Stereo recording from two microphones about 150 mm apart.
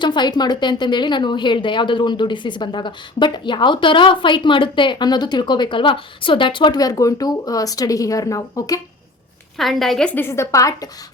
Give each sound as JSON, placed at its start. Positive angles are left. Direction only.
{"t": 0.0, "sound": "a woman's voice", "side_deg": 30}
{"t": 9.6, "sound": "a woman's voice", "side_deg": 0}
{"t": 10.2, "sound": "a woman's voice", "side_deg": 15}